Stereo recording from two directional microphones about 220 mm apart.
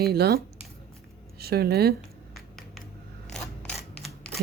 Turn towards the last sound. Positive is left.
turn(degrees=0)  # may be behind; listen again after turning